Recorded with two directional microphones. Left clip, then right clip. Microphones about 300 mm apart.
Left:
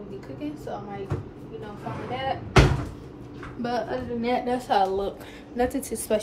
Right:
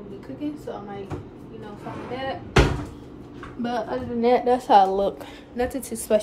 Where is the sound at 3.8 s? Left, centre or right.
Right.